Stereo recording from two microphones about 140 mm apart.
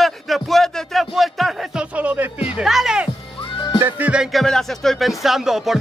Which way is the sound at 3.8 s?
10° right (ahead or behind).